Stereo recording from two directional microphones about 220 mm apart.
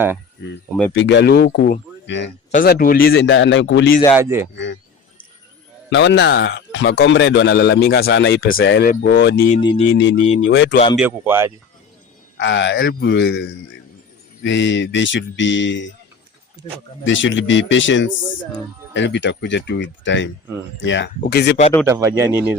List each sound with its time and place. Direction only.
0.9 s speech: 55° left (ahead or behind)
2.5 s speech: 40° left (ahead or behind)
4.1 s speech: 10° right (ahead or behind)
4.5 s speech: 55° left (ahead or behind)
5.9 s speech: 55° left (ahead or behind)
9.6 s speech: 20° left (ahead or behind)
9.9 s speech: 55° left (ahead or behind)
10.9 s speech: 10° right (ahead or behind)
12.4 s speech: 55° left (ahead or behind)
14.4 s speech: 55° left (ahead or behind)
17.0 s speech: 60° left (ahead or behind)
21.8 s speech: 15° right (ahead or behind)